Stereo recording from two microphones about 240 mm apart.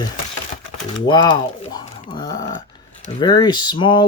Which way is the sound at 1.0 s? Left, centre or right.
Centre.